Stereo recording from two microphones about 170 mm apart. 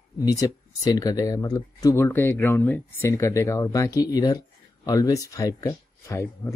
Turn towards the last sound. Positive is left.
turn(degrees=15)  # may be behind; listen again after turning